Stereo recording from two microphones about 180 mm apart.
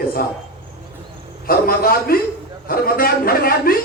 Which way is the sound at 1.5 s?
55° left (ahead or behind).